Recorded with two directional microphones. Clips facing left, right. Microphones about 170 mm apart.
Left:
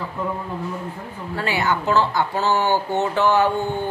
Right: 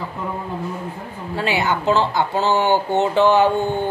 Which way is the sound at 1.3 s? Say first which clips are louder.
Right 2 dB; 20° right (ahead or behind).